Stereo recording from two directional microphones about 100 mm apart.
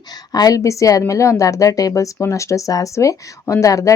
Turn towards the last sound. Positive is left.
turn(degrees=35)  # may be behind; listen again after turning